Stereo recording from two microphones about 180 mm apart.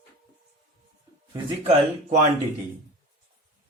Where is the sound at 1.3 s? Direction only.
35° right (ahead or behind).